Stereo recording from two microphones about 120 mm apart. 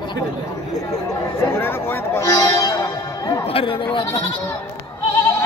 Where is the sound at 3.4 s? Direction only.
50° left (ahead or behind).